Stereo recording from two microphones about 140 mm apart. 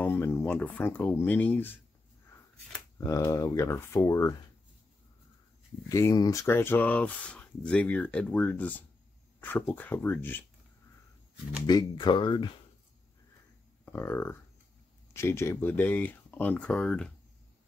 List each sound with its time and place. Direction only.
0.0 s speech: 15° left (ahead or behind)
3.0 s speech: 20° left (ahead or behind)
5.9 s speech: 20° left (ahead or behind)
6.4 s speech: 15° left (ahead or behind)
11.6 s speech: 30° left (ahead or behind)
13.8 s speech: 15° left (ahead or behind)